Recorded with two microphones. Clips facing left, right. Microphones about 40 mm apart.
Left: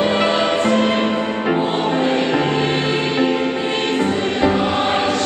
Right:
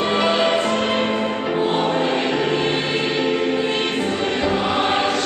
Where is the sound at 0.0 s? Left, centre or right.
Centre.